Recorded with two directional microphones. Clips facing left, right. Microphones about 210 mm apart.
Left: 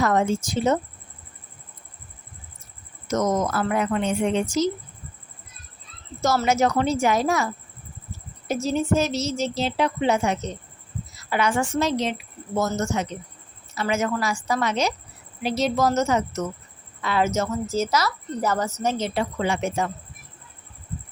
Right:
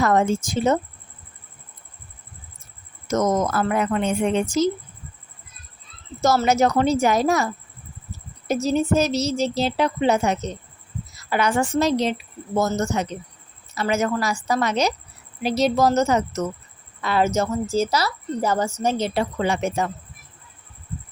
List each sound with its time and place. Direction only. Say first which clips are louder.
0.0 s speech: right 2 dB; 50° right (ahead or behind)
3.1 s speech: right 2 dB; 50° right (ahead or behind)
6.2 s a woman's voice: right 2 dB; 40° right (ahead or behind)